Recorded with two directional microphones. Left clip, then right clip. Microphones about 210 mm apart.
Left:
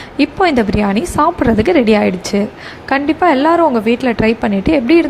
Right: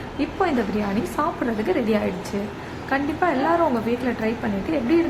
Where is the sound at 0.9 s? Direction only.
40° left (ahead or behind).